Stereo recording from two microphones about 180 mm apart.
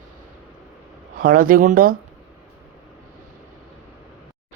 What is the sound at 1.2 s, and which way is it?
Speech, 50° right (ahead or behind).